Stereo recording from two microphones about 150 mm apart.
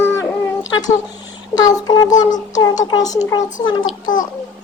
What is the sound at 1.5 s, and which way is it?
Speech, 25° left (ahead or behind).